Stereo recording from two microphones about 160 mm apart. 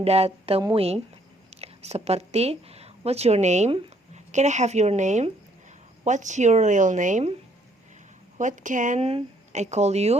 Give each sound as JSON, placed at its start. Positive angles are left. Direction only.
{"t": 0.0, "sound": "speech", "side_deg": -40}
{"t": 8.4, "sound": "speech", "side_deg": -50}